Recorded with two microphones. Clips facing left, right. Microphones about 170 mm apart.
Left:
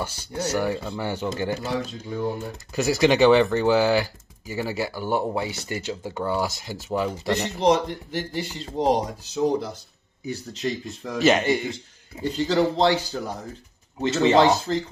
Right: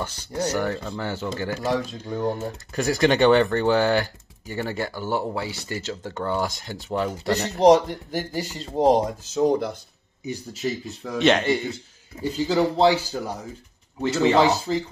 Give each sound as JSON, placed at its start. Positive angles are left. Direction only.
{"t": 0.0, "sound": "speech", "side_deg": 10}
{"t": 2.0, "sound": "speech", "side_deg": -45}
{"t": 2.3, "sound": "speech", "side_deg": 5}
{"t": 7.3, "sound": "speech", "side_deg": -40}
{"t": 10.2, "sound": "speech", "side_deg": -10}
{"t": 12.2, "sound": "a man's voice", "side_deg": -10}
{"t": 14.0, "sound": "speech", "side_deg": 20}
{"t": 14.7, "sound": "a man's voice", "side_deg": -5}